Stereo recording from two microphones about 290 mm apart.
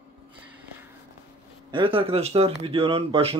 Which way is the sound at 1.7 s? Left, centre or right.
Centre.